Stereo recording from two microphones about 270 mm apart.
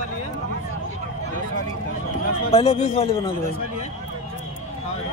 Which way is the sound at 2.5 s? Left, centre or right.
Left.